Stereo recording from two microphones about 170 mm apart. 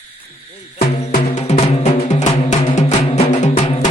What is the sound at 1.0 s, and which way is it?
Music, 40° left (ahead or behind).